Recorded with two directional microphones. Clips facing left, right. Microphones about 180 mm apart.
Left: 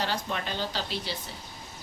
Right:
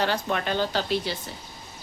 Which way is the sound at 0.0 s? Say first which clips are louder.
Right 5 dB; 60° right (ahead or behind).